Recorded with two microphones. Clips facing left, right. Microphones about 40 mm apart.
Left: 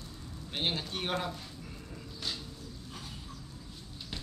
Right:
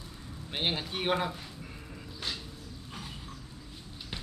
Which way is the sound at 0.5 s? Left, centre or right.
Centre.